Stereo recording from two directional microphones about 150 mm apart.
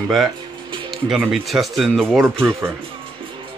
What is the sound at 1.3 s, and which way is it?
Speech, centre (ahead or behind).